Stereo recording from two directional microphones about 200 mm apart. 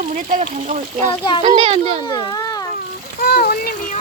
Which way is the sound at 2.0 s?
20° left (ahead or behind).